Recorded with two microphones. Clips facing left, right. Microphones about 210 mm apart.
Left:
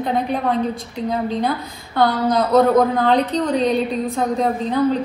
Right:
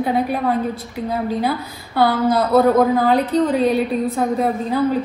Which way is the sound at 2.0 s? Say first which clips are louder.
Right 1 dB; 5° right (ahead or behind).